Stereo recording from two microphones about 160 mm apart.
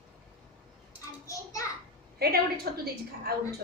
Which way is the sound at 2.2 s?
75° right (ahead or behind).